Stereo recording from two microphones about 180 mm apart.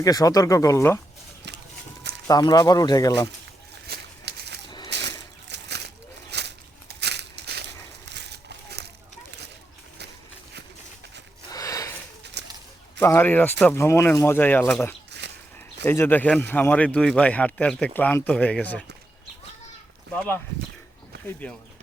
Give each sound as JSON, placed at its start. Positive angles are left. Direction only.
{"t": 0.0, "sound": "speech", "side_deg": 20}
{"t": 1.5, "sound": "horse", "side_deg": -70}
{"t": 2.2, "sound": "speech", "side_deg": 20}
{"t": 3.8, "sound": "a sound", "side_deg": -65}
{"t": 8.0, "sound": "crumpling", "side_deg": -75}
{"t": 11.4, "sound": "a sound", "side_deg": 20}
{"t": 12.4, "sound": "a sound", "side_deg": -70}
{"t": 13.0, "sound": "speech", "side_deg": 10}
{"t": 20.1, "sound": "speech", "side_deg": 10}